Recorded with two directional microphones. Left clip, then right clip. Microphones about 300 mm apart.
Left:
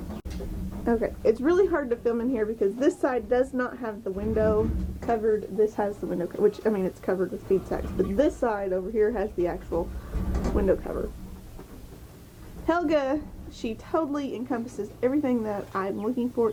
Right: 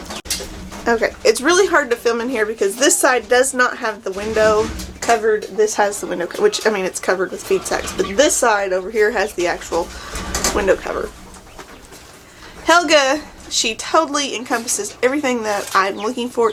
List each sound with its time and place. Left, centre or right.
0.1 s a sound: centre
0.9 s speech: centre
12.6 s a woman's voice: centre